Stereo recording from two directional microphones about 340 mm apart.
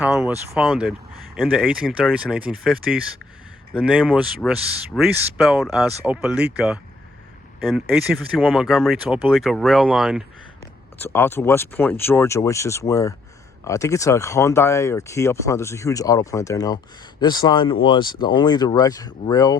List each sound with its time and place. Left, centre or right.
0.0 s speech: centre
7.6 s speech: centre